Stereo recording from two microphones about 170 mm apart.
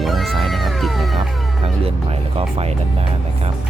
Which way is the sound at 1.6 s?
35° right (ahead or behind).